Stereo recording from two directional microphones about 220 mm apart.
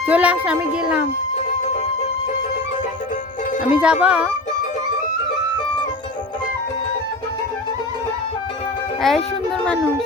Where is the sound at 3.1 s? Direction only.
35° left (ahead or behind).